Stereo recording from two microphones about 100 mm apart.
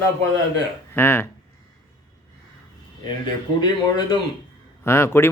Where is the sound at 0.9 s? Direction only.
25° left (ahead or behind).